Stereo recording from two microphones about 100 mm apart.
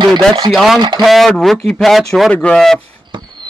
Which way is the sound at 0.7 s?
45° right (ahead or behind).